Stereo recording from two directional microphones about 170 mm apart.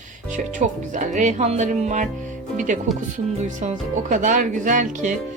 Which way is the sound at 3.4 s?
45° right (ahead or behind).